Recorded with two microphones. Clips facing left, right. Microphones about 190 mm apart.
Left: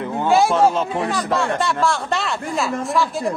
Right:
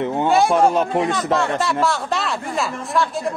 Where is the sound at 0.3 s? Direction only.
Centre (ahead or behind).